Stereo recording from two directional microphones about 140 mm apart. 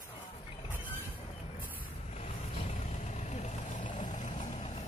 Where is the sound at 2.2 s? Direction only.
50° left (ahead or behind).